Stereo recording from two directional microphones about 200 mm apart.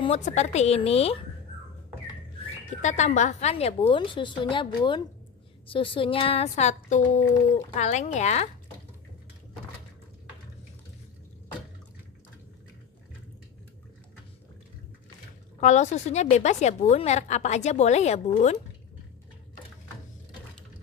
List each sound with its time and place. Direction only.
0.0 s a woman's voice: 35° left (ahead or behind)
2.8 s a woman's voice: 35° left (ahead or behind)
15.6 s a woman's voice: 35° left (ahead or behind)